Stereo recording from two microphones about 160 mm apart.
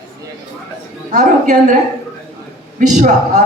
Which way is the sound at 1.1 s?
50° right (ahead or behind).